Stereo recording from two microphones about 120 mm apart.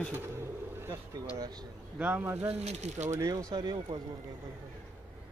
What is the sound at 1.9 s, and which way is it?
Speech, 15° right (ahead or behind).